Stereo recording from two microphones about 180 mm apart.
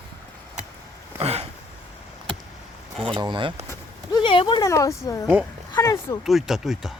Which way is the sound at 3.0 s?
25° right (ahead or behind).